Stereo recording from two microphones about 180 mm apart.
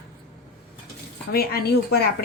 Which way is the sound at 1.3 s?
60° left (ahead or behind).